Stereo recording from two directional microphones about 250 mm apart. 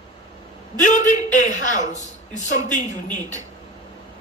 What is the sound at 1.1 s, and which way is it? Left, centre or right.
Speech, left.